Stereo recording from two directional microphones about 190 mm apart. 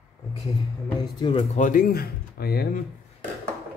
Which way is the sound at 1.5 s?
45° left (ahead or behind).